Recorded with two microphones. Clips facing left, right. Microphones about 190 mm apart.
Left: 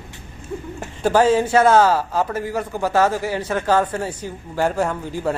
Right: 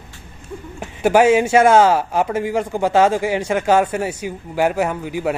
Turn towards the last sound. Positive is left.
turn(degrees=-10)  # may be behind; listen again after turning